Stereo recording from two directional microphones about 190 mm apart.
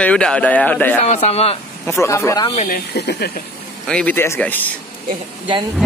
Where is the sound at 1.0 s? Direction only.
35° left (ahead or behind).